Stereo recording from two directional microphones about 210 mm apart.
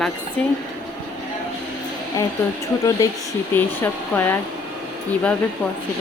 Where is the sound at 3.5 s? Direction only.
10° left (ahead or behind).